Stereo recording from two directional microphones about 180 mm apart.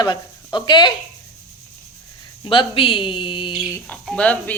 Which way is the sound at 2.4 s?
30° left (ahead or behind).